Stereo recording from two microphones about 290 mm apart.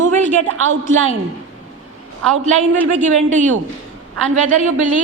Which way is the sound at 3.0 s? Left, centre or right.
Right.